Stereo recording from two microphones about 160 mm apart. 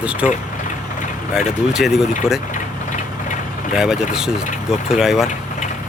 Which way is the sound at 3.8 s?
5° right (ahead or behind).